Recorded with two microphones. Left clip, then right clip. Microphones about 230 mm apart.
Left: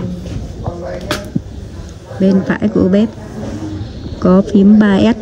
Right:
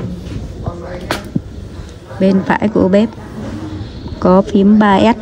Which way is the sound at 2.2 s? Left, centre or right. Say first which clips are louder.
Right 2 dB; centre.